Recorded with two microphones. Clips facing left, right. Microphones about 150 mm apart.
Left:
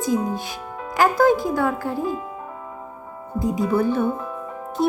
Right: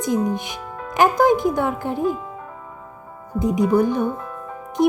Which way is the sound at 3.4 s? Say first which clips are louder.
Right 3 dB; 20° right (ahead or behind).